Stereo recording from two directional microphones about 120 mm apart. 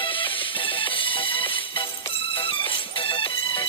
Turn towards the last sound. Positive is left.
turn(degrees=45)  # may be behind; listen again after turning